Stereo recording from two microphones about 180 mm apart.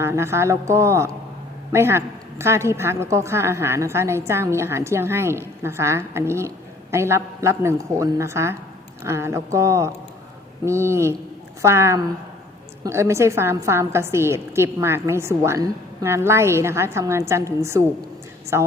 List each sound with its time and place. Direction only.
0.0 s a woman's voice: 15° right (ahead or behind)